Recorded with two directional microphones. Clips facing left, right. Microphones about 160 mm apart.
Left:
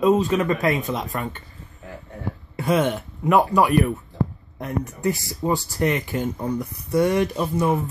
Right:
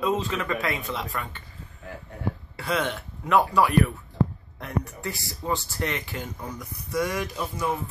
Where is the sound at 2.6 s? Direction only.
20° left (ahead or behind).